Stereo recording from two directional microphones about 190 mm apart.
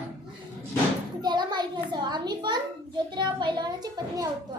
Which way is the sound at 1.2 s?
25° right (ahead or behind).